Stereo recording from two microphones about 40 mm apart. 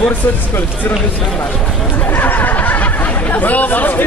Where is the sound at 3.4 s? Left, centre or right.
Left.